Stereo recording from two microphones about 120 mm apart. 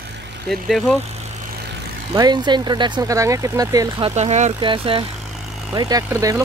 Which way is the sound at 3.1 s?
25° right (ahead or behind).